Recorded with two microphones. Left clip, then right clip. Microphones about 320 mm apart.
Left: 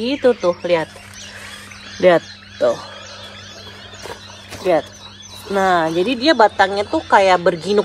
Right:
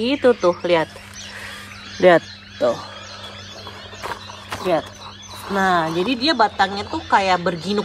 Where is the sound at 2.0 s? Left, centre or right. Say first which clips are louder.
Even; right.